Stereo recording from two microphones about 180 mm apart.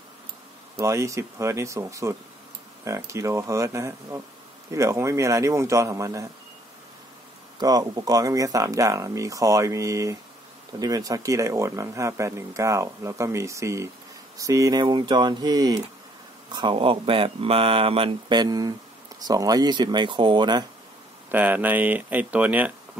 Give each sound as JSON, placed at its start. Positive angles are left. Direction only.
{"t": 0.7, "sound": "speech", "side_deg": -15}
{"t": 7.5, "sound": "speech", "side_deg": -20}
{"t": 21.3, "sound": "speech", "side_deg": -10}